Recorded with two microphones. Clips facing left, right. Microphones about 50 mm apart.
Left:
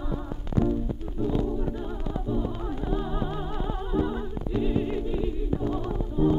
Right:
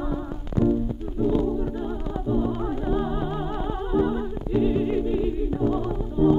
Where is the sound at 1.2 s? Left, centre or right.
Centre.